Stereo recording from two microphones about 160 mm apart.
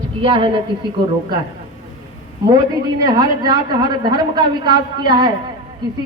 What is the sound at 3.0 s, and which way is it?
A woman's voice, 25° right (ahead or behind).